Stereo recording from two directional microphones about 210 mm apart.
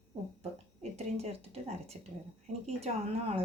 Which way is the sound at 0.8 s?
30° right (ahead or behind).